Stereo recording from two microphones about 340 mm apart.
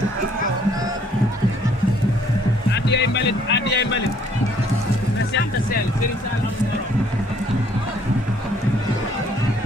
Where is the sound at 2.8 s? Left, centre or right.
Left.